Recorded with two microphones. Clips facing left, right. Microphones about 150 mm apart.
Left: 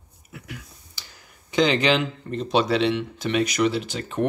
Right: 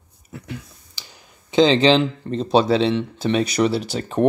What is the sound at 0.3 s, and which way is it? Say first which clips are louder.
Speech: right 6 dB; 25° right (ahead or behind).